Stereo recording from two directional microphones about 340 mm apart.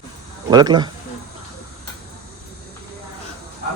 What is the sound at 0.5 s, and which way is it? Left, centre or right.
Speech, centre.